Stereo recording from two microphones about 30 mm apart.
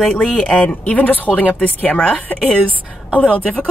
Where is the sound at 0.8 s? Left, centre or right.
Left.